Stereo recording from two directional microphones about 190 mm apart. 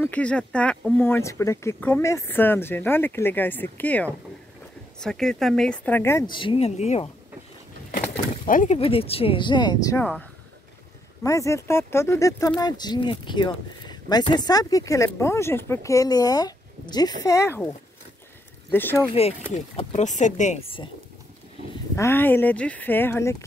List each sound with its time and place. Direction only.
0.0 s speech: 5° left (ahead or behind)
6.3 s speech: 30° left (ahead or behind)
8.5 s speech: 45° left (ahead or behind)
8.7 s speech: 30° left (ahead or behind)
11.2 s speech: 15° left (ahead or behind)
18.7 s speech: 10° left (ahead or behind)
19.5 s speech: 40° left (ahead or behind)
21.9 s speech: 15° left (ahead or behind)